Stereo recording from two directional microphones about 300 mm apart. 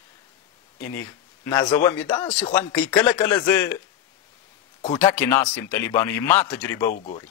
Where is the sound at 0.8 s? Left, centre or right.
Centre.